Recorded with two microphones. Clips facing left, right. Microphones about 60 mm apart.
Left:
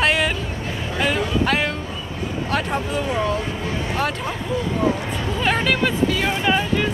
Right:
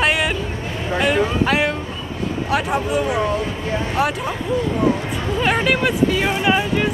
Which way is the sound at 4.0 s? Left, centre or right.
Centre.